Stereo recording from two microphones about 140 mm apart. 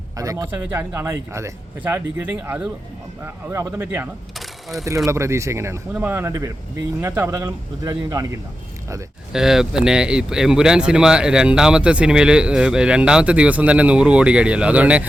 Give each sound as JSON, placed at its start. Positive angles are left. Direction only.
{"t": 0.2, "sound": "speech", "side_deg": -25}
{"t": 4.4, "sound": "a sound", "side_deg": 0}
{"t": 5.0, "sound": "speech", "side_deg": -20}
{"t": 9.3, "sound": "speech", "side_deg": -5}